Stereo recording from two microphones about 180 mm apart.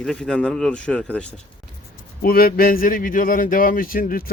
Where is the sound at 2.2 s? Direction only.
55° left (ahead or behind).